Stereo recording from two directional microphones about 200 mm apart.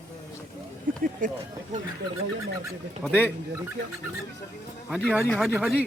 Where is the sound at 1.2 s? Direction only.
40° right (ahead or behind).